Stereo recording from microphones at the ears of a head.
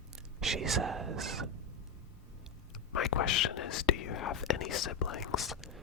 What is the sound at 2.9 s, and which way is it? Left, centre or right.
Whispering, left.